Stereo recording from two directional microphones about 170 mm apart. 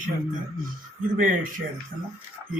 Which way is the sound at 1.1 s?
55° right (ahead or behind).